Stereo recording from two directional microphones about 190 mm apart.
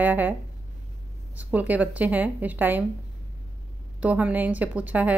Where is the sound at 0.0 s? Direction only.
10° right (ahead or behind).